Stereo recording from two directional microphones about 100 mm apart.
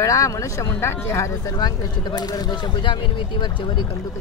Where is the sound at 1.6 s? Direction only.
45° left (ahead or behind).